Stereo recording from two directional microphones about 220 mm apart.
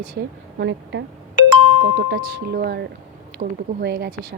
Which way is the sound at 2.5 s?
45° right (ahead or behind).